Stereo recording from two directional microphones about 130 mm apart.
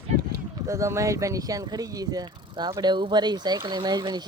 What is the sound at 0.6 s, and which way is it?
Speech, 25° right (ahead or behind).